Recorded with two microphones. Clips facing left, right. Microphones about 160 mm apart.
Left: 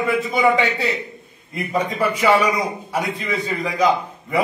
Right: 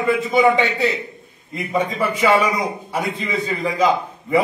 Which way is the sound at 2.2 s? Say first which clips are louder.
Right 1 dB; centre (ahead or behind).